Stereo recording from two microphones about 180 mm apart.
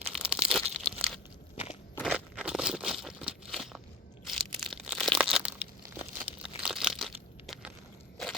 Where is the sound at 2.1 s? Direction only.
5° right (ahead or behind).